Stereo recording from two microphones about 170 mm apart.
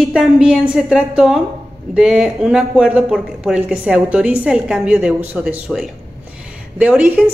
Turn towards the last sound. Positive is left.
turn(degrees=-5)  # may be behind; listen again after turning